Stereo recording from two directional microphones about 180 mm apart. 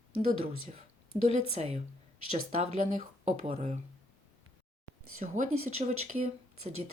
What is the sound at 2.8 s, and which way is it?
Speech, 45° right (ahead or behind).